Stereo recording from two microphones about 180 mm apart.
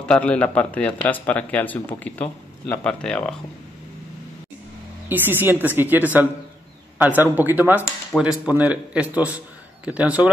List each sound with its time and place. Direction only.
0.0 s a man's voice: 5° left (ahead or behind)
5.0 s a man's voice: 10° right (ahead or behind)